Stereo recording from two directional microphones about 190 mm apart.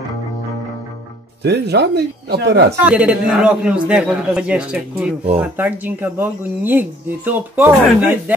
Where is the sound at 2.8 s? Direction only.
5° right (ahead or behind).